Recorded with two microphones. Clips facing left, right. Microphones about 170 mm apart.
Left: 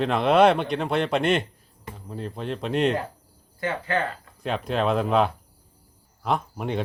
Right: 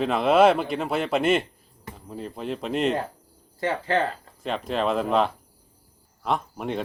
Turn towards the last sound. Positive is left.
turn(degrees=0)  # may be behind; listen again after turning